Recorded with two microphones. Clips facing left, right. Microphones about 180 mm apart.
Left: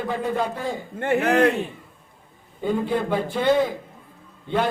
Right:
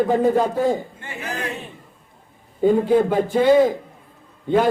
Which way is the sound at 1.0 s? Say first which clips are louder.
Left 11 dB; 65° left (ahead or behind).